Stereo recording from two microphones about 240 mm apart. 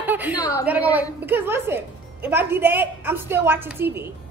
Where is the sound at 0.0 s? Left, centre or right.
Centre.